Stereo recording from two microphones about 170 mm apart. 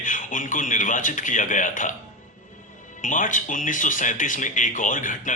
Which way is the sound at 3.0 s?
50° left (ahead or behind).